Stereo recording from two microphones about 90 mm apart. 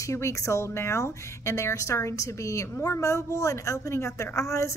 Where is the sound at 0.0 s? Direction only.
35° left (ahead or behind).